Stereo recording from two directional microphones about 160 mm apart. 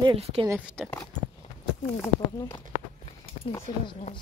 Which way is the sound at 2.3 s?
25° left (ahead or behind).